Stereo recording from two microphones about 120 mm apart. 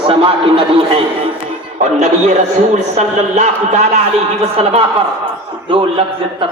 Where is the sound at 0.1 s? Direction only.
45° right (ahead or behind).